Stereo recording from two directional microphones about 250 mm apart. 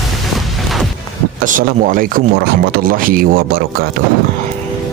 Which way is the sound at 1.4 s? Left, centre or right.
Right.